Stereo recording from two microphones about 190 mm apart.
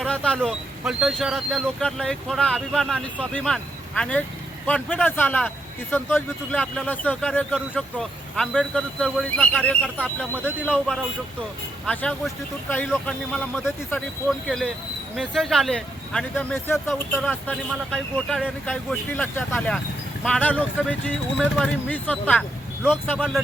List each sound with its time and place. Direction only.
0.0 s a man's voice: 5° left (ahead or behind)
9.8 s a man's voice: 5° right (ahead or behind)